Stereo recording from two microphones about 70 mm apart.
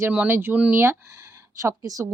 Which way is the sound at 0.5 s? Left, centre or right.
Right.